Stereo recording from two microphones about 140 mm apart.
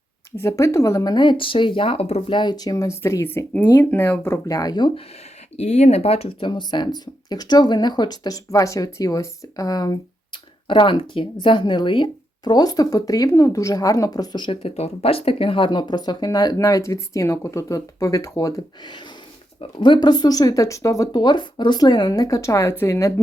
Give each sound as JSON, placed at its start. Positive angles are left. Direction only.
{"t": 0.3, "sound": "speech", "side_deg": 20}
{"t": 5.5, "sound": "speech", "side_deg": 55}